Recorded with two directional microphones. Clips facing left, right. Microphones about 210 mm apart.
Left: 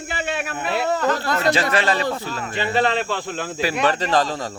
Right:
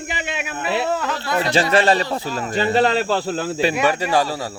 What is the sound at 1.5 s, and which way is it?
Speech, 30° right (ahead or behind).